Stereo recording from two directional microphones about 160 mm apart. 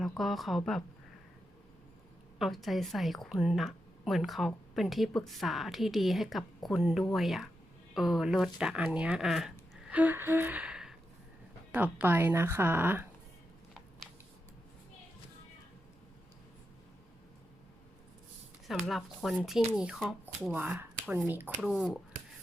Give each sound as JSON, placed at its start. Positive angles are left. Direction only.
{"t": 0.0, "sound": "a woman's voice", "side_deg": 0}
{"t": 2.4, "sound": "a woman's voice", "side_deg": 0}
{"t": 9.9, "sound": "gasp", "side_deg": -10}
{"t": 11.7, "sound": "speech", "side_deg": -10}
{"t": 18.7, "sound": "a woman's voice", "side_deg": 0}